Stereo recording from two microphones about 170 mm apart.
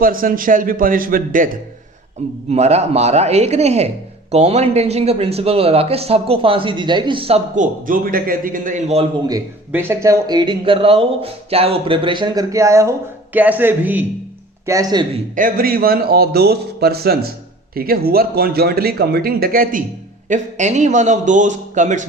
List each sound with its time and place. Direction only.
0.0 s speech: 55° right (ahead or behind)
2.5 s speech: 40° right (ahead or behind)
9.2 s speech: 15° right (ahead or behind)
14.7 s speech: 20° right (ahead or behind)
15.4 s speech: 60° right (ahead or behind)
20.2 s a man's voice: 45° right (ahead or behind)